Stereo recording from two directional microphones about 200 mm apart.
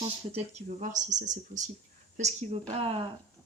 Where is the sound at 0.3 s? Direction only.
35° right (ahead or behind).